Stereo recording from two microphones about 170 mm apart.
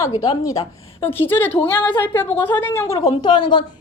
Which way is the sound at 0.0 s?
20° left (ahead or behind).